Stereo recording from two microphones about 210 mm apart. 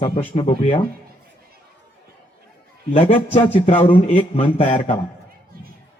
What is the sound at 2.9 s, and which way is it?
Speech, 35° left (ahead or behind).